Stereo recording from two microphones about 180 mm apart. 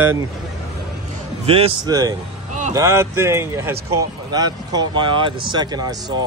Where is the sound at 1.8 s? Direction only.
20° right (ahead or behind).